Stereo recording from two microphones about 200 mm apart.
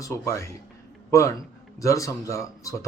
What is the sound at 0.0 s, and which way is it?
Speech, 15° left (ahead or behind).